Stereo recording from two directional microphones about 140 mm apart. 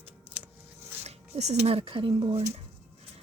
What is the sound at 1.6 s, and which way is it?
Speech, 45° right (ahead or behind).